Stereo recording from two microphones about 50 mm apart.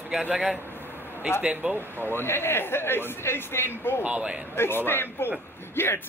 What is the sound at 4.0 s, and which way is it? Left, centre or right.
Speech, right.